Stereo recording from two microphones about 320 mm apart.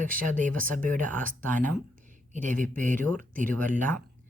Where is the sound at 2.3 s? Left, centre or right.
Right.